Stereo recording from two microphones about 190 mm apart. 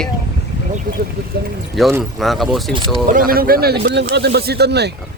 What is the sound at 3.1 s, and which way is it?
Speech, 50° right (ahead or behind).